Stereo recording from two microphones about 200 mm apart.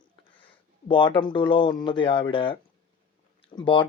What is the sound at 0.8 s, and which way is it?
Speech, 25° left (ahead or behind).